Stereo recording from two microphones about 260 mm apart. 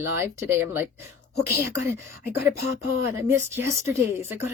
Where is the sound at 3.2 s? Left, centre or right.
Centre.